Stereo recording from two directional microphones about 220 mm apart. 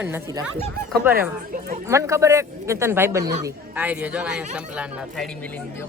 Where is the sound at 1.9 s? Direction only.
15° right (ahead or behind).